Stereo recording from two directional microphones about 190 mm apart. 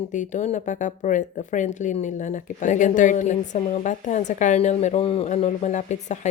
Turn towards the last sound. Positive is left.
turn(degrees=40)  # may be behind; listen again after turning